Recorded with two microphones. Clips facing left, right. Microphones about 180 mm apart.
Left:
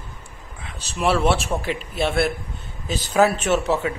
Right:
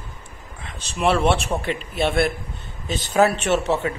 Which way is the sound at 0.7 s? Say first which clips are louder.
Right 1 dB; 5° left (ahead or behind).